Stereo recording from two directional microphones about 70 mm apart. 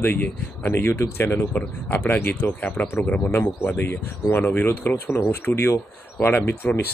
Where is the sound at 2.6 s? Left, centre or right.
Left.